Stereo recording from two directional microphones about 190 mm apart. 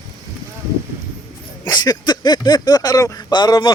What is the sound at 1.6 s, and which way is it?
Speech, 20° left (ahead or behind).